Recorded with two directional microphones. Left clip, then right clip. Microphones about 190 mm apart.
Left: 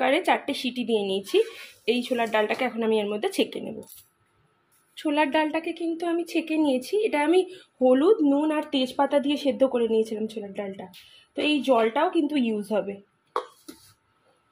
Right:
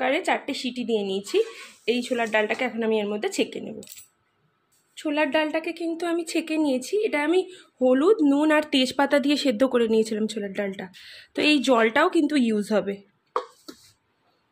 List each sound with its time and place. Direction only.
0.0 s a woman's voice: 5° left (ahead or behind)
4.9 s a woman's voice: centre (ahead or behind)
8.2 s speech: 25° right (ahead or behind)